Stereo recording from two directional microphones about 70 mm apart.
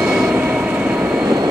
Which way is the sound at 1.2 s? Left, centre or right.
Right.